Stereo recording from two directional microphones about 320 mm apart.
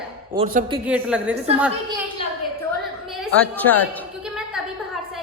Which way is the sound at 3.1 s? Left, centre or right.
Centre.